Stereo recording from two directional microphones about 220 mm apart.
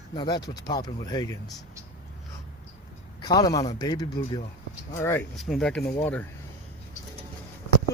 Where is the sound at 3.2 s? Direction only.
20° left (ahead or behind).